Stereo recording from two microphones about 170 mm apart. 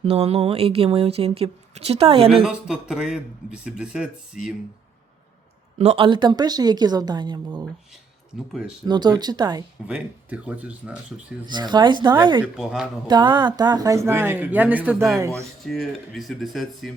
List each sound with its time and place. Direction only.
0.0 s speech: 35° right (ahead or behind)
2.4 s a man's voice: 5° right (ahead or behind)
5.7 s speech: 40° right (ahead or behind)
6.1 s a woman's voice: 25° right (ahead or behind)
8.9 s a woman's voice: 25° right (ahead or behind)
9.8 s speech: 10° right (ahead or behind)
11.5 s a woman's voice: 25° right (ahead or behind)
12.5 s a man's voice: 5° right (ahead or behind)
13.1 s speech: 25° right (ahead or behind)
15.6 s a man's voice: centre (ahead or behind)